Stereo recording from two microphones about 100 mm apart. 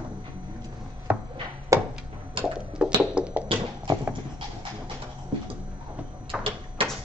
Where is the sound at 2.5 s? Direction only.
10° right (ahead or behind).